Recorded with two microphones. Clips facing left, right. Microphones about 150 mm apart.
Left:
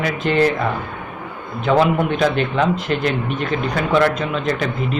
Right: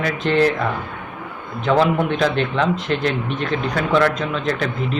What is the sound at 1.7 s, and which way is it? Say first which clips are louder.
A man's voice: left 1 dB; 5° left (ahead or behind).